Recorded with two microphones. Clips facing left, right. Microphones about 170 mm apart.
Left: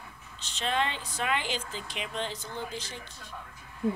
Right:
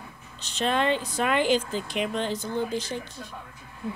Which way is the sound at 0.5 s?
50° right (ahead or behind).